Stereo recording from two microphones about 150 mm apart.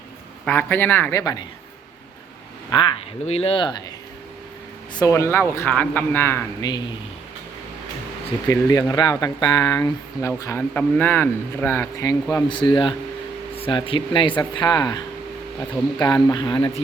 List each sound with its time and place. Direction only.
0.4 s a man's voice: 15° left (ahead or behind)
1.2 s speech: 25° left (ahead or behind)
2.6 s speech: 30° left (ahead or behind)
3.2 s speech: 40° left (ahead or behind)
4.9 s a man's voice: 20° left (ahead or behind)
8.4 s a man's voice: 25° left (ahead or behind)
12.3 s speech: 30° left (ahead or behind)
16.3 s speech: 30° left (ahead or behind)